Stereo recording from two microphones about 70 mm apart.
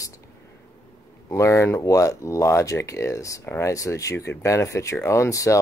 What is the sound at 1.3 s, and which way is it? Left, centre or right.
Speech, left.